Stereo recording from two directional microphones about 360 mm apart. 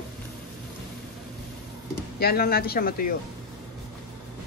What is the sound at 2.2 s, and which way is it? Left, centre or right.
Speech, left.